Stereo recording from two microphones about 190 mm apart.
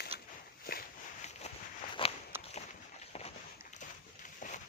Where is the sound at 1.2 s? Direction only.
35° left (ahead or behind).